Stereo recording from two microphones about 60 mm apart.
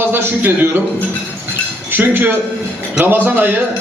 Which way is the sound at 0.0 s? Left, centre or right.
Right.